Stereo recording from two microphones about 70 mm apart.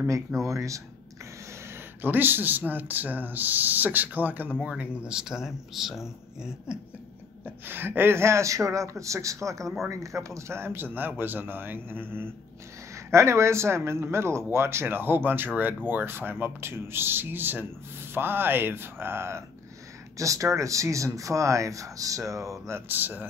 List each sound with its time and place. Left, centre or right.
0.4 s speech: right
2.0 s speech: right
4.6 s speech: centre
7.4 s speech: right
12.9 s speech: right